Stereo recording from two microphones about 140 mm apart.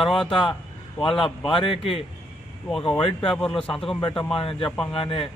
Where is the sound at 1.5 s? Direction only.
40° left (ahead or behind).